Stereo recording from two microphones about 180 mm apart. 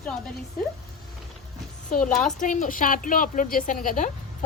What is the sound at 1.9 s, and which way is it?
A woman's voice, 45° left (ahead or behind).